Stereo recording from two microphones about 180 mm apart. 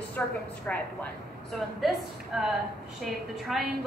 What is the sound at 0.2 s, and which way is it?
A woman's voice, 10° left (ahead or behind).